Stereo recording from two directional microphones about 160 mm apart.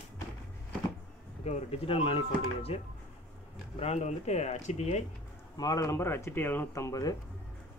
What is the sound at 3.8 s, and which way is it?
Speech, 45° left (ahead or behind).